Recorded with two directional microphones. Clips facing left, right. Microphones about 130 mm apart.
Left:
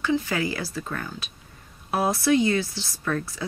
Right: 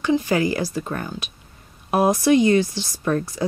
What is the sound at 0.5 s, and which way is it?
Speech, 40° right (ahead or behind).